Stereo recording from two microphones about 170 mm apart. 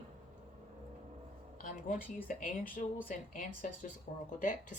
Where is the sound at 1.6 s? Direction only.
50° left (ahead or behind).